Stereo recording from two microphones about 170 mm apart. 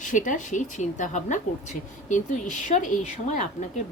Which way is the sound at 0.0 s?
50° left (ahead or behind).